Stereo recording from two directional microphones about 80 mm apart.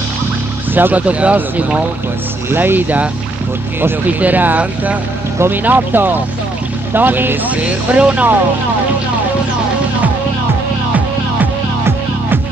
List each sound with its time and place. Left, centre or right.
0.7 s speech: right
2.5 s speech: right